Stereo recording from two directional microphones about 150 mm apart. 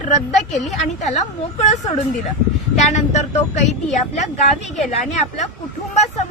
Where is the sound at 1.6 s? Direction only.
50° left (ahead or behind).